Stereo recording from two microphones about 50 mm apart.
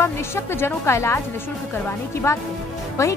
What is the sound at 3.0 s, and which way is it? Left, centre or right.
Speech, left.